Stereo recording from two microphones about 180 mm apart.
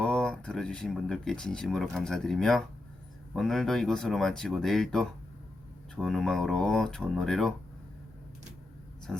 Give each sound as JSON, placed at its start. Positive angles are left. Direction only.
{"t": 0.0, "sound": "speech", "side_deg": 5}